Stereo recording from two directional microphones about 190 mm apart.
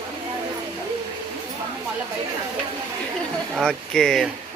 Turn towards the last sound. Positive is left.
turn(degrees=5)  # may be behind; listen again after turning